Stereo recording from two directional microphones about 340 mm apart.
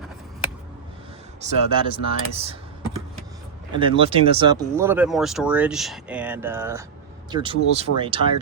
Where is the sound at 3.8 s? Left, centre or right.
Centre.